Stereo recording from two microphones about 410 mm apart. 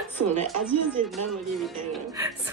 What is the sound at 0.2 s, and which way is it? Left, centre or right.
Speech, right.